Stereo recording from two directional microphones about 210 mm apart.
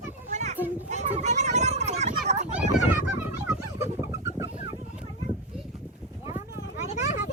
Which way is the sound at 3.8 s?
15° right (ahead or behind).